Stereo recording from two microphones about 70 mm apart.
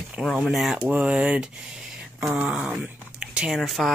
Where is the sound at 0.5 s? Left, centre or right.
Centre.